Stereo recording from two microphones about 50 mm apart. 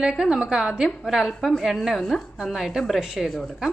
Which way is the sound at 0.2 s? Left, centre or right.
Centre.